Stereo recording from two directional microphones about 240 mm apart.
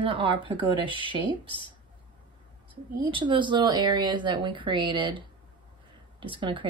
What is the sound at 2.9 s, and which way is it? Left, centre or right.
Speech, centre.